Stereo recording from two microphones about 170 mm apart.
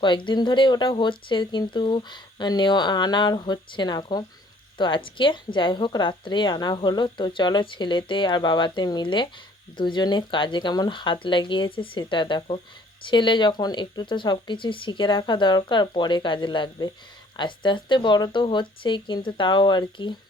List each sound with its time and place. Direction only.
0.0 s a woman's voice: 30° left (ahead or behind)